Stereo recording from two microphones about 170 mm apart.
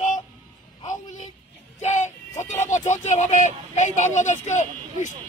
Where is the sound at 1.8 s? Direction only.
45° left (ahead or behind).